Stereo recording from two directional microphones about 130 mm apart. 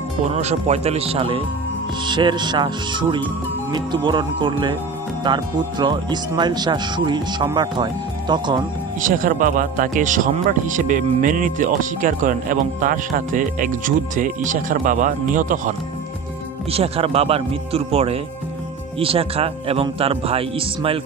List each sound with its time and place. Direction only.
0.3 s speech: 60° right (ahead or behind); by 8.6 s 35° right (ahead or behind)
9.0 s speech: 90° right
16.7 s speech: 50° right (ahead or behind)